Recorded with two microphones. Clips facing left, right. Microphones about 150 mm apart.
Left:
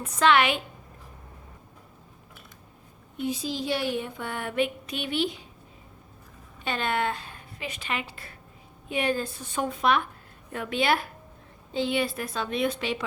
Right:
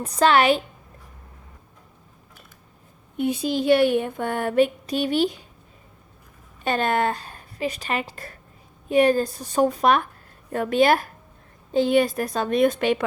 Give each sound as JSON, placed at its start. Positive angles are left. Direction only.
{"t": 0.0, "sound": "a woman's voice", "side_deg": -35}
{"t": 3.2, "sound": "speech", "side_deg": -60}
{"t": 6.7, "sound": "a woman's voice", "side_deg": -45}